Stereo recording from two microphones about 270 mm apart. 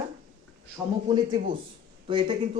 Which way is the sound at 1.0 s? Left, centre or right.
Centre.